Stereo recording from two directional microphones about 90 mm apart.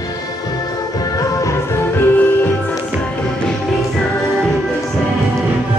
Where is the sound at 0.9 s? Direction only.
40° left (ahead or behind).